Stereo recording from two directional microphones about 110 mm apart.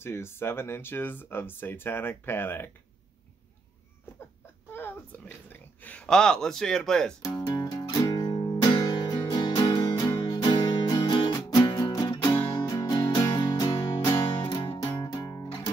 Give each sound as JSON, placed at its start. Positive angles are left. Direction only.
{"t": 0.0, "sound": "speech", "side_deg": 20}
{"t": 4.7, "sound": "speech", "side_deg": 20}
{"t": 7.2, "sound": "music", "side_deg": 35}
{"t": 15.2, "sound": "music", "side_deg": 30}